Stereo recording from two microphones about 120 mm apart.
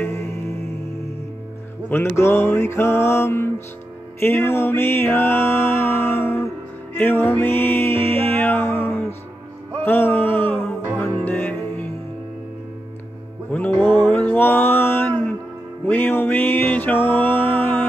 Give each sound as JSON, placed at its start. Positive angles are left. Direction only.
{"t": 0.0, "sound": "music", "side_deg": 20}
{"t": 1.9, "sound": "music", "side_deg": 15}
{"t": 13.7, "sound": "a sound", "side_deg": 20}
{"t": 15.9, "sound": "music", "side_deg": 15}